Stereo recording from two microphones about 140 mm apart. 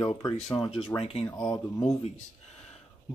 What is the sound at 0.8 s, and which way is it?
Speech, 40° left (ahead or behind).